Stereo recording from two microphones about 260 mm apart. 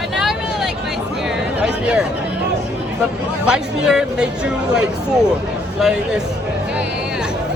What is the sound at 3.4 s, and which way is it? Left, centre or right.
Speech, centre.